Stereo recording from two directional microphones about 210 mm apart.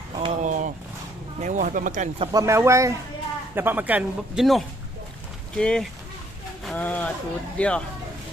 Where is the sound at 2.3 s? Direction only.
15° right (ahead or behind); by 7.8 s 5° left (ahead or behind).